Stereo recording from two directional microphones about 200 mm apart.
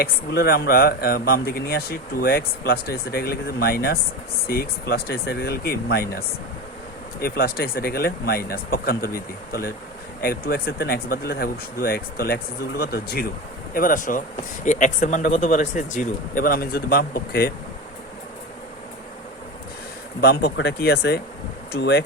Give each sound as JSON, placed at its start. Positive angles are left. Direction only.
{"t": 0.0, "sound": "speech", "side_deg": 50}
{"t": 7.2, "sound": "speech", "side_deg": 50}
{"t": 20.2, "sound": "speech", "side_deg": 50}